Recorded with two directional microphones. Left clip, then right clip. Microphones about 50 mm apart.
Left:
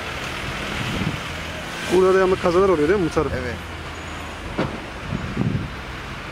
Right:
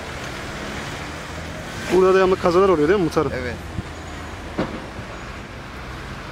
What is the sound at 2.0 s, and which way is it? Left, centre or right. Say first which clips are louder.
Speech: right 2 dB; right.